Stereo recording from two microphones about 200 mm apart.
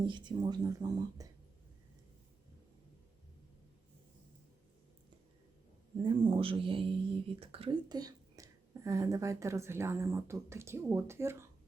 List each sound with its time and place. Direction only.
0.0 s speech: 25° right (ahead or behind)
6.0 s a woman's voice: 25° right (ahead or behind)